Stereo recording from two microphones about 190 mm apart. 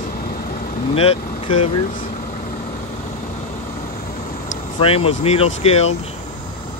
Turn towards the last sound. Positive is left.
turn(degrees=30)  # may be behind; listen again after turning